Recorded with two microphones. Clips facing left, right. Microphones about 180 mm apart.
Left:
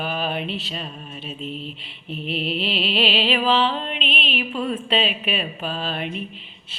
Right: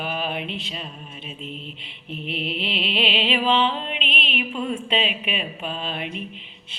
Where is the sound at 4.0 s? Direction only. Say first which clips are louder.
Left 3 dB; 35° left (ahead or behind).